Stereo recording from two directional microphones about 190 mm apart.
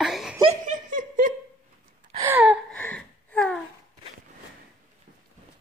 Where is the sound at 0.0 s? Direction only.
Centre (ahead or behind).